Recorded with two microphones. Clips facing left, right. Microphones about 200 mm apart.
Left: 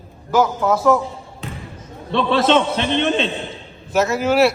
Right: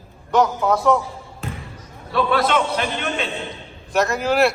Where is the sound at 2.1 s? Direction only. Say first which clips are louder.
Left 3 dB; 25° left (ahead or behind).